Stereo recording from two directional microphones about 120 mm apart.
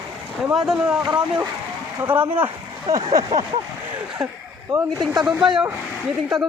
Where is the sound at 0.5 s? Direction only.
5° right (ahead or behind).